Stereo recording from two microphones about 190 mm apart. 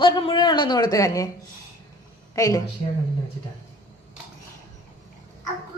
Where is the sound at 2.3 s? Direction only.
15° left (ahead or behind).